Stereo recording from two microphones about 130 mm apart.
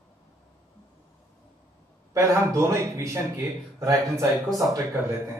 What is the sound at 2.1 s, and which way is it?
Speech, 20° right (ahead or behind).